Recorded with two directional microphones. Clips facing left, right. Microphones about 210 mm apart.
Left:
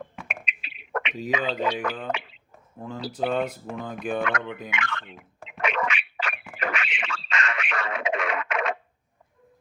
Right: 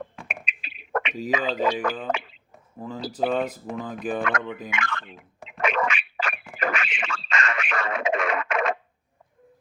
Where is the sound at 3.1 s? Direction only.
Centre (ahead or behind).